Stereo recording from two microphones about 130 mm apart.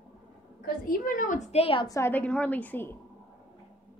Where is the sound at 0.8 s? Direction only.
90° left; by 1.9 s 45° left (ahead or behind).